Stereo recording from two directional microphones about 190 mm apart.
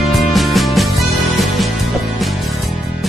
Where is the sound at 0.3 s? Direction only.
Centre (ahead or behind).